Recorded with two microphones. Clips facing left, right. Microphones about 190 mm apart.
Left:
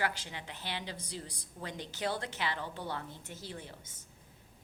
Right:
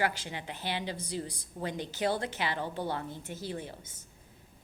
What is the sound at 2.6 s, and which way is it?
Speech, 35° right (ahead or behind).